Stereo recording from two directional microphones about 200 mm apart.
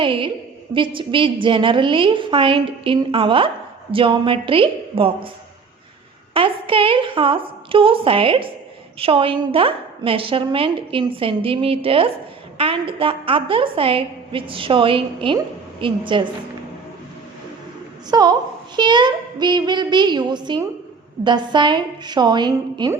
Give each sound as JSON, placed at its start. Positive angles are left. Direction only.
{"t": 0.0, "sound": "a woman's voice", "side_deg": -25}
{"t": 6.3, "sound": "a woman's voice", "side_deg": -25}
{"t": 18.1, "sound": "a woman's voice", "side_deg": -20}